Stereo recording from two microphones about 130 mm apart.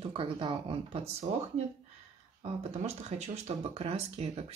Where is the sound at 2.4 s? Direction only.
55° right (ahead or behind).